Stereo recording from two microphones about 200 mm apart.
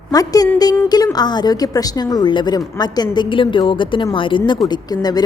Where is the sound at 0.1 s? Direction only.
20° left (ahead or behind).